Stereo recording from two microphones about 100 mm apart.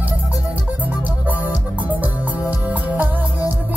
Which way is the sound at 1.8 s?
15° right (ahead or behind).